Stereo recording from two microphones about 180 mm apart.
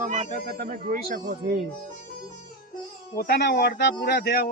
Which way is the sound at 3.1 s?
60° left (ahead or behind).